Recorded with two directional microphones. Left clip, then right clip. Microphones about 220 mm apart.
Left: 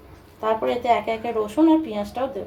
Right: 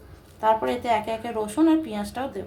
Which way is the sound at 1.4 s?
20° right (ahead or behind).